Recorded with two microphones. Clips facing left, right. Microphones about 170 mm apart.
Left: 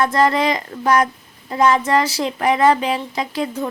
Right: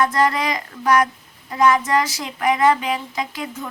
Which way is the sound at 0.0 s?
30° left (ahead or behind).